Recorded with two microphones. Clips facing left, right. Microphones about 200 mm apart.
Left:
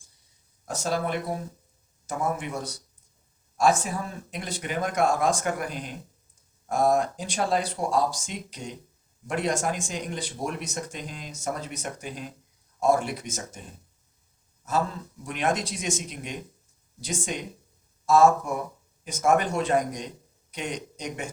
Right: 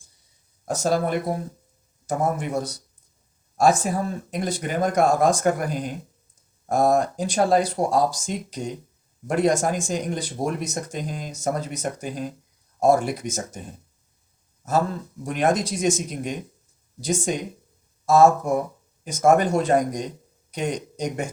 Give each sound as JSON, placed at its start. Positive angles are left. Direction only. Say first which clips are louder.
{"t": 0.6, "sound": "speech", "louder": "right 6 dB", "side_deg": -40}
{"t": 15.2, "sound": "a man's voice", "louder": "right 5 dB", "side_deg": -45}